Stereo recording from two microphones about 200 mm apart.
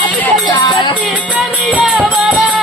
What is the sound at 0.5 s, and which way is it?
Music, 20° left (ahead or behind).